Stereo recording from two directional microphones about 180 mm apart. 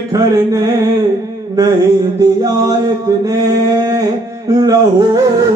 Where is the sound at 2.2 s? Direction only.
20° right (ahead or behind).